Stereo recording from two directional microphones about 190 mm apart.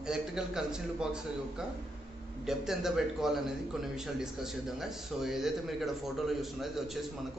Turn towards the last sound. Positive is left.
turn(degrees=0)  # may be behind; listen again after turning